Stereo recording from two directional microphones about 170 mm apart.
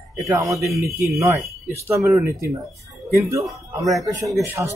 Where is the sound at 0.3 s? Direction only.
20° right (ahead or behind).